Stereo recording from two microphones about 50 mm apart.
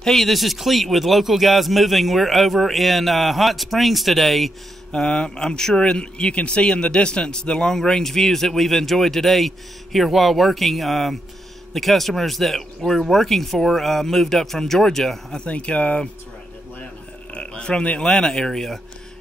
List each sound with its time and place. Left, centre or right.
0.0 s speech: centre
4.9 s a man's voice: centre
15.4 s speech: left
17.3 s a man's voice: centre